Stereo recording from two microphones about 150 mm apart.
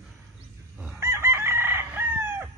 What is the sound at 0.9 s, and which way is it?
Chicken, 20° right (ahead or behind).